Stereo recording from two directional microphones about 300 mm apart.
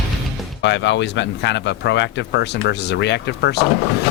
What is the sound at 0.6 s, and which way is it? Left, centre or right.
Speech, left.